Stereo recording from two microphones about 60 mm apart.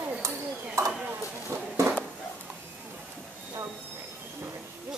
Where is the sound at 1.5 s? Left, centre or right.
Right.